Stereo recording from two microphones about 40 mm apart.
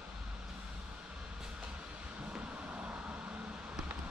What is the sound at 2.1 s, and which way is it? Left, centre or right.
Vehicle, right.